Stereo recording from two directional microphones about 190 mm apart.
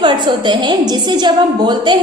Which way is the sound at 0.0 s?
25° right (ahead or behind).